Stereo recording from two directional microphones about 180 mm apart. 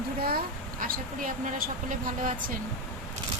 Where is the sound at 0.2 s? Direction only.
55° right (ahead or behind).